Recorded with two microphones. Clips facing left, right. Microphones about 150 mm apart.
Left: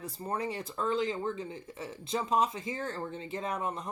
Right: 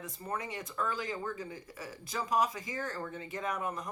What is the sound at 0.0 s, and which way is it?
Speech, 30° left (ahead or behind).